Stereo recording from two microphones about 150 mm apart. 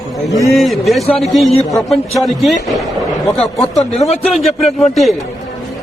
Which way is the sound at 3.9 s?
45° left (ahead or behind).